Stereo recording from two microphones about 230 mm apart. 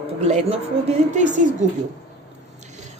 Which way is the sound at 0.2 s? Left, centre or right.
Right.